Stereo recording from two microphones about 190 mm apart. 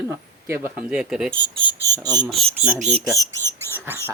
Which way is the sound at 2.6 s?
5° right (ahead or behind).